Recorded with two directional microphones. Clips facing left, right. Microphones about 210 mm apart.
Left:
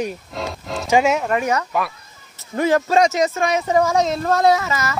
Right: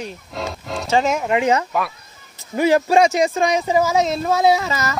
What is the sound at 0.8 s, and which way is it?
Speech, 15° left (ahead or behind).